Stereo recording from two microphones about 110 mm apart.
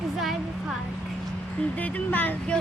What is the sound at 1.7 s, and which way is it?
Speech, 15° left (ahead or behind).